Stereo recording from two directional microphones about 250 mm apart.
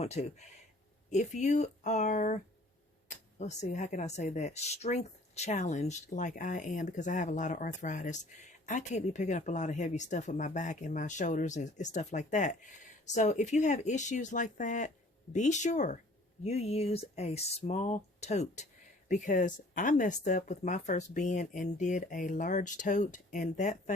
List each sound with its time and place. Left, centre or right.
0.0 s speech: left